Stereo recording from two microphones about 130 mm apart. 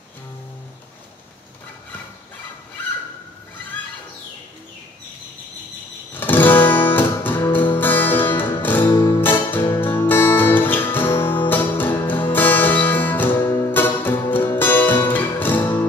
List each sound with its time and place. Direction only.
6.1 s guitar: 15° left (ahead or behind)
7.7 s music: 15° left (ahead or behind)
9.2 s music: 15° left (ahead or behind)